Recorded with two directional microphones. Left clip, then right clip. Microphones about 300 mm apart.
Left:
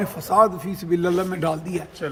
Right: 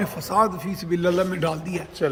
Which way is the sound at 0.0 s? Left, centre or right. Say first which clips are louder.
Left 3 dB; centre.